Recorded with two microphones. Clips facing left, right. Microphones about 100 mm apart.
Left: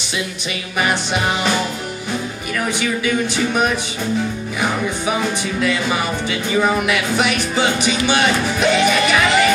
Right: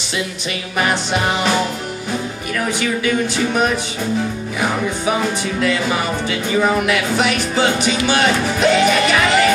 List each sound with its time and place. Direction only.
0.7 s speech: 15° left (ahead or behind)
6.5 s speech: 10° left (ahead or behind)
8.5 s music: 20° left (ahead or behind)